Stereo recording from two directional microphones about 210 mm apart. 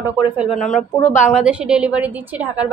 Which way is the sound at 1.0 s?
35° left (ahead or behind).